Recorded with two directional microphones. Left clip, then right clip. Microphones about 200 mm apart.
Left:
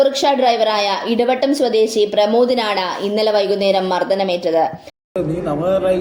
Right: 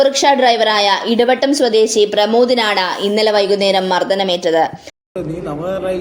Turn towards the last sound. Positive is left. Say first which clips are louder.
# left 4 dB
turn(degrees=0)  # may be behind; listen again after turning